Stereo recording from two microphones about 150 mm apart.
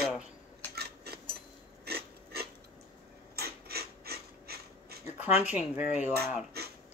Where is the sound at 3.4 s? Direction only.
90° right.